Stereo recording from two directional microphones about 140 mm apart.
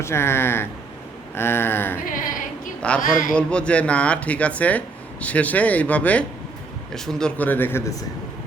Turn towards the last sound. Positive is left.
turn(degrees=15)  # may be behind; listen again after turning